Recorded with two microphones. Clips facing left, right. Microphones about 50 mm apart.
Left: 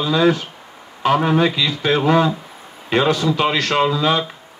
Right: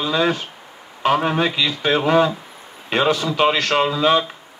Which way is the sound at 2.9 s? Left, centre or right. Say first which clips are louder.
Left 2 dB; centre.